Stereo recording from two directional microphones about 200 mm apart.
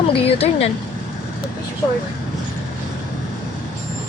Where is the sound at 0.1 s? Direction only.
30° left (ahead or behind).